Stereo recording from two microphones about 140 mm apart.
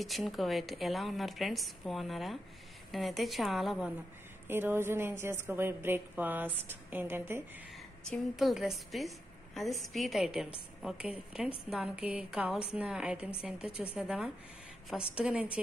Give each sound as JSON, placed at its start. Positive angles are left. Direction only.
{"t": 0.0, "sound": "a woman's voice", "side_deg": 0}
{"t": 4.5, "sound": "a woman's voice", "side_deg": -15}
{"t": 8.0, "sound": "a woman's voice", "side_deg": 5}